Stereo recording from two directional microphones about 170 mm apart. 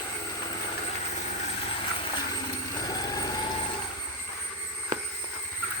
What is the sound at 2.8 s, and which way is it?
Vehicle, 25° left (ahead or behind).